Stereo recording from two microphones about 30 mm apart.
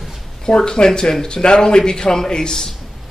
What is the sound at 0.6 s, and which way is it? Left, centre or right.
Speech, left.